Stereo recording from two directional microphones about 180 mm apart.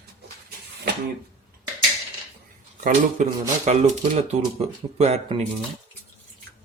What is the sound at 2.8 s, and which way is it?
Speech, 45° right (ahead or behind).